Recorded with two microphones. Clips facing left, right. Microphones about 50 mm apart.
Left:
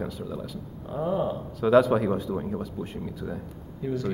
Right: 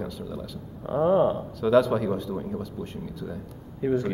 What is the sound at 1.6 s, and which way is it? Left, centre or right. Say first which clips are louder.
A man's voice: left 1 dB; centre.